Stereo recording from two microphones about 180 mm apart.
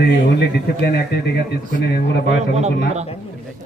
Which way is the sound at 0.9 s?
60° left (ahead or behind).